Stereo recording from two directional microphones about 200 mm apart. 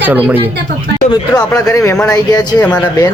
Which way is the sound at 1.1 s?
15° left (ahead or behind).